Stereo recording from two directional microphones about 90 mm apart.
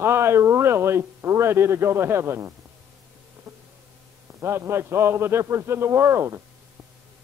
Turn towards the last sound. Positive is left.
turn(degrees=-30)  # may be behind; listen again after turning